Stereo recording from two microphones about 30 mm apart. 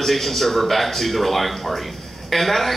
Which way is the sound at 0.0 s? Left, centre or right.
Centre.